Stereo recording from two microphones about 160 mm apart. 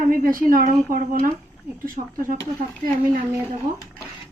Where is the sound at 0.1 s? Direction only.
60° right (ahead or behind).